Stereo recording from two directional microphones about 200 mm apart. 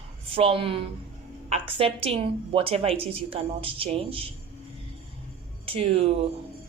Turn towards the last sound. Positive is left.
turn(degrees=-30)  # may be behind; listen again after turning